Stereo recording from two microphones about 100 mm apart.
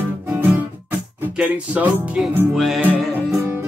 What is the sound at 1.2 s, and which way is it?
Music, 15° right (ahead or behind).